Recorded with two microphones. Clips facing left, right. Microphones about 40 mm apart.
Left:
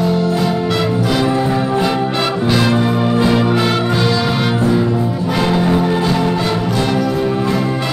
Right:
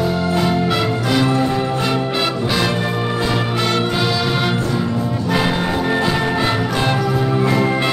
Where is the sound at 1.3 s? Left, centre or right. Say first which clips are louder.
Left 2 dB; centre.